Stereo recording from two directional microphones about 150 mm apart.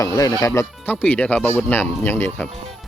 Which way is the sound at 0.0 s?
25° left (ahead or behind).